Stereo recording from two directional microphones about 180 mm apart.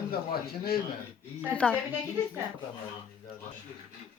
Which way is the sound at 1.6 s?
5° left (ahead or behind).